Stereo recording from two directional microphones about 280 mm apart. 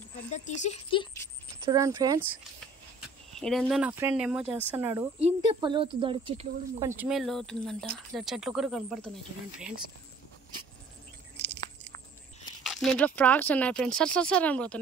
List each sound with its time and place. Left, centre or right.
0.3 s speech: left
1.7 s speech: centre
3.3 s speech: centre
7.0 s speech: centre
12.6 s speech: centre